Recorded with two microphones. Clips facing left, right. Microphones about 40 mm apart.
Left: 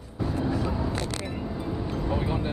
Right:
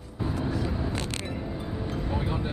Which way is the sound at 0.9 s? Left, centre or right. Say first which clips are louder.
Left 1 dB; right.